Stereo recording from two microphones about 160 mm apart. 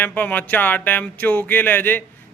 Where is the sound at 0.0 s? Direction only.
10° left (ahead or behind).